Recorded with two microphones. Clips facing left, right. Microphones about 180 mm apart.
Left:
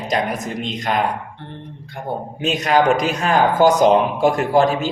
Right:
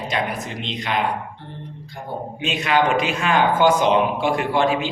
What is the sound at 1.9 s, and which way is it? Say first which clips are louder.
Speech: left 7 dB; 60° left (ahead or behind).